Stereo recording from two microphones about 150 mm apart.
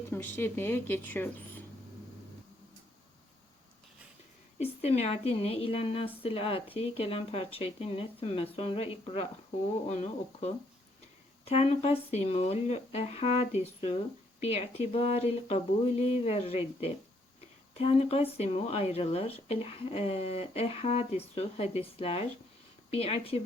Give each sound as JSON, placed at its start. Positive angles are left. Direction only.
{"t": 0.1, "sound": "speech", "side_deg": 15}
{"t": 4.5, "sound": "speech", "side_deg": 45}
{"t": 11.4, "sound": "speech", "side_deg": 40}